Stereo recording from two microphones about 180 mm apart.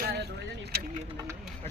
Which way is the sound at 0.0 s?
65° right (ahead or behind).